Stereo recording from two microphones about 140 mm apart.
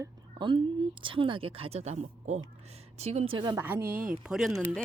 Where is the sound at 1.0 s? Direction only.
40° right (ahead or behind).